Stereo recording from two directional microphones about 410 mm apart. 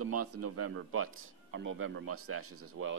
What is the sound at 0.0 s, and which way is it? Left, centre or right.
Speech, right.